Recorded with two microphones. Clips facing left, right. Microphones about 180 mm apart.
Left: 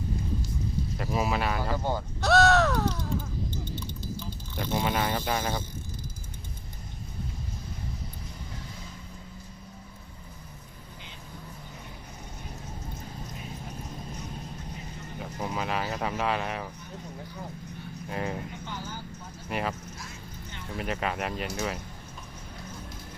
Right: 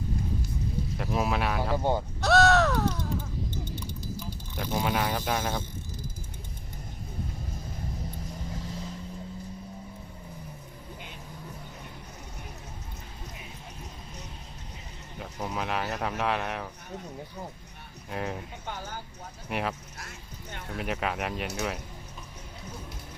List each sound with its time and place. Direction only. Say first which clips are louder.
0.9 s speech: even; centre (ahead or behind)
1.7 s speech: right 3 dB; 25° right (ahead or behind)
2.2 s caw: even; centre (ahead or behind)
4.5 s speech: even; centre (ahead or behind)
15.2 s speech: left 1 dB; centre (ahead or behind)
18.1 s speech: left 1 dB; centre (ahead or behind)
18.6 s a sound: even; 55° right (ahead or behind)
19.5 s speech: even; centre (ahead or behind)
20.0 s a sound: left 2 dB; 65° right (ahead or behind)
20.7 s speech: even; centre (ahead or behind)